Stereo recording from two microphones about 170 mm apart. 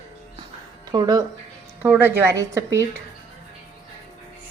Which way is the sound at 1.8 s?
10° right (ahead or behind).